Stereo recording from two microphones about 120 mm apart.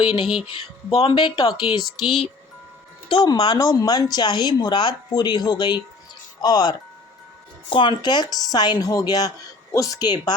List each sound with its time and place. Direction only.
0.4 s speech: 55° left (ahead or behind)
1.4 s speech: 30° left (ahead or behind)
1.8 s speech: centre (ahead or behind)
3.1 s speech: 35° left (ahead or behind)